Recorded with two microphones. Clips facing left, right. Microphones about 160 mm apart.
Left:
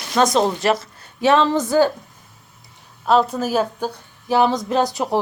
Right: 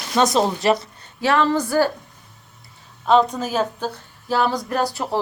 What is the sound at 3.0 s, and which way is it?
Speech, 5° left (ahead or behind).